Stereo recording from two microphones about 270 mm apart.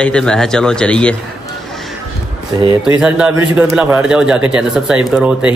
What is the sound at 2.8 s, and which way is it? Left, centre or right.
Speech, centre.